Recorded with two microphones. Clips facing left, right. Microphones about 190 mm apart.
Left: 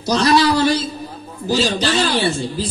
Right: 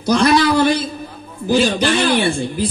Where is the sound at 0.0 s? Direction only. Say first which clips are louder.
Right 1 dB; 55° right (ahead or behind).